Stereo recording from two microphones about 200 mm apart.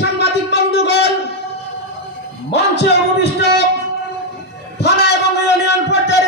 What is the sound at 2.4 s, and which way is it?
Speech, 55° left (ahead or behind).